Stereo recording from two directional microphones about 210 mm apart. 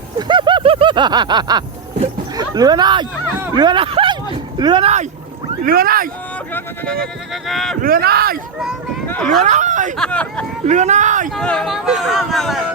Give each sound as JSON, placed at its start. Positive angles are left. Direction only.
{"t": 0.2, "sound": "a sound", "side_deg": -20}
{"t": 3.4, "sound": "speech", "side_deg": -20}
{"t": 5.6, "sound": "speech", "side_deg": -45}
{"t": 6.5, "sound": "speech", "side_deg": 5}
{"t": 7.8, "sound": "speech", "side_deg": -45}
{"t": 9.0, "sound": "speech", "side_deg": 5}
{"t": 9.4, "sound": "speech", "side_deg": -35}
{"t": 10.0, "sound": "speech", "side_deg": 5}
{"t": 10.7, "sound": "speech", "side_deg": -35}
{"t": 11.3, "sound": "speech", "side_deg": 0}